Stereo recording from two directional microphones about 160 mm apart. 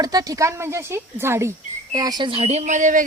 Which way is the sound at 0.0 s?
25° right (ahead or behind).